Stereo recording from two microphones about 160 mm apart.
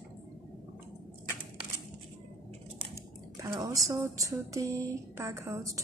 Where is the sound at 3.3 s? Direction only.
20° right (ahead or behind).